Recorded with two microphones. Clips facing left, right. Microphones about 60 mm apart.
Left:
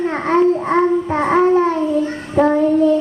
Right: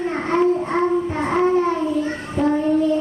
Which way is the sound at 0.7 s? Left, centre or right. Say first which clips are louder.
Left 4 dB; left.